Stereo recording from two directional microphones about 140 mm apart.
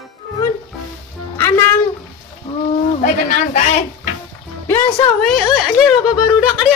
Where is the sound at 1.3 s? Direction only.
15° left (ahead or behind).